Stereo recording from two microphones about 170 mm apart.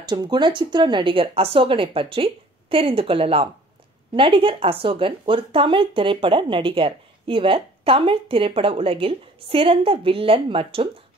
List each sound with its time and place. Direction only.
0.0 s speech: 25° right (ahead or behind)